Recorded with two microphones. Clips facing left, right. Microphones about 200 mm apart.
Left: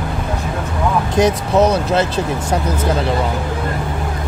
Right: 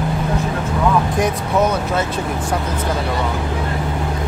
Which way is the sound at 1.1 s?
80° left.